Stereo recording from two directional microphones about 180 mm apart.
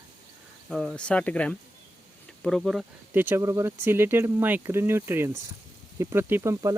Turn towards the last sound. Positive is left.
turn(degrees=-20)  # may be behind; listen again after turning